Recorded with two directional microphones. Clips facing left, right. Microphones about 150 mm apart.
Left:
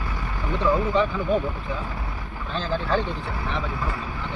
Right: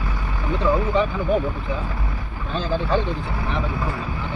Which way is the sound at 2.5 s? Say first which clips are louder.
Right 3 dB; 15° right (ahead or behind).